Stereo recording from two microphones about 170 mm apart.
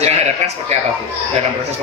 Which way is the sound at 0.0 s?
40° right (ahead or behind).